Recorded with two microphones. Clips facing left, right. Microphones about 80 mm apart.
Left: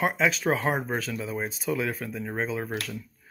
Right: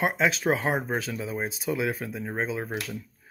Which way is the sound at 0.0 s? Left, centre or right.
Right.